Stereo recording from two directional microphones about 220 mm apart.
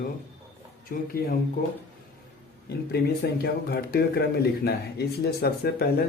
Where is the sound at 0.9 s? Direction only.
45° left (ahead or behind).